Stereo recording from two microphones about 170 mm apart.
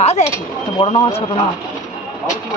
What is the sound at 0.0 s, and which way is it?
Speech, 40° left (ahead or behind).